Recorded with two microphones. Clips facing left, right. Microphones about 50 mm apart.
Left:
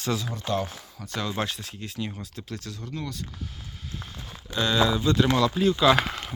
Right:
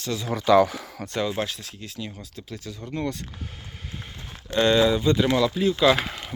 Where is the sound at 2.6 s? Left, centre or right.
Centre.